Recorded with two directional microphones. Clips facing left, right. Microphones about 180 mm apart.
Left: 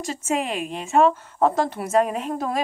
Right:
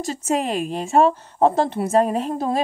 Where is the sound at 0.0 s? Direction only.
35° right (ahead or behind).